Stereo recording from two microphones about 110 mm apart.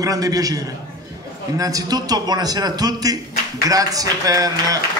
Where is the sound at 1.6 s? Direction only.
35° right (ahead or behind).